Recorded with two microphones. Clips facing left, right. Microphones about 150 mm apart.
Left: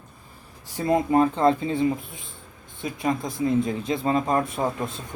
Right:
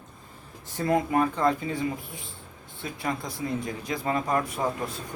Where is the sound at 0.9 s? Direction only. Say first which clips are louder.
Left 4 dB; 25° left (ahead or behind).